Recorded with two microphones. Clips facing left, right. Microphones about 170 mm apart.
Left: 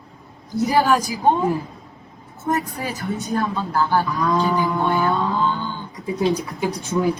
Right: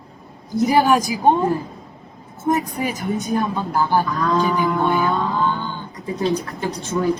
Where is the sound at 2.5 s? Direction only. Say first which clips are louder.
Right 3 dB; 15° right (ahead or behind).